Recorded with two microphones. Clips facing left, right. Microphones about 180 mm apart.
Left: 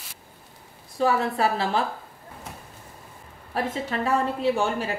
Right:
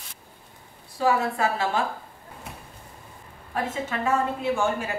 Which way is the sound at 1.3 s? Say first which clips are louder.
Left 1 dB; 35° left (ahead or behind).